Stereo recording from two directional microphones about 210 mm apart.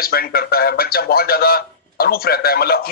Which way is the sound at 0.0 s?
45° left (ahead or behind).